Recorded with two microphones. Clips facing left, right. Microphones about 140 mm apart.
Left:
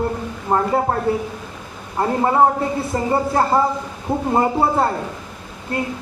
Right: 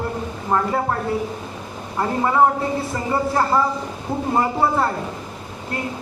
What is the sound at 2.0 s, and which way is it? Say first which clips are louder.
A man's voice: left 2 dB; 30° left (ahead or behind).